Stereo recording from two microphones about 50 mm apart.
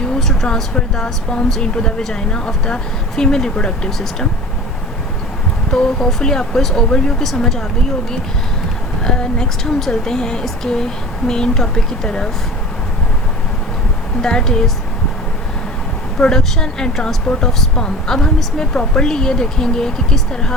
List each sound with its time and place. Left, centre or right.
0.4 s a woman's voice: centre
5.7 s a woman's voice: centre
9.0 s a woman's voice: centre
14.2 s a woman's voice: centre
16.1 s a woman's voice: centre